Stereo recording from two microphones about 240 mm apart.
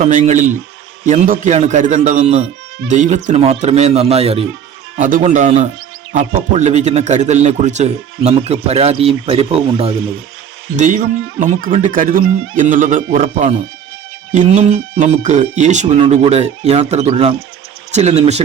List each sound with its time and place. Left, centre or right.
0.0 s speech: right